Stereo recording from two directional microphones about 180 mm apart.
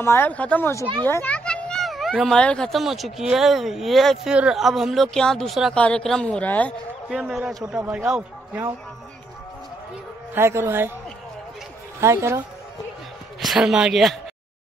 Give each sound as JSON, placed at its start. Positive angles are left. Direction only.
{"t": 0.0, "sound": "speech", "side_deg": 15}
{"t": 7.1, "sound": "speech", "side_deg": 0}
{"t": 10.3, "sound": "speech", "side_deg": -15}
{"t": 12.0, "sound": "speech", "side_deg": -15}
{"t": 13.4, "sound": "speech", "side_deg": 0}